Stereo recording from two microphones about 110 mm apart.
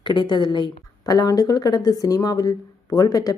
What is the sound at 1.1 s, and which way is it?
Speech, 35° left (ahead or behind).